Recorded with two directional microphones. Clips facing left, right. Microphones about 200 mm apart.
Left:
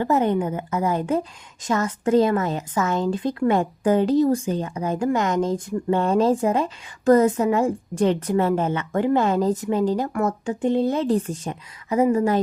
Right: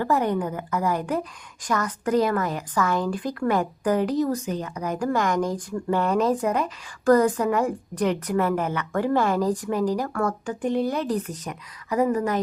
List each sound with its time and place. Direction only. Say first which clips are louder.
0.0 s speech: left 3 dB; 20° left (ahead or behind)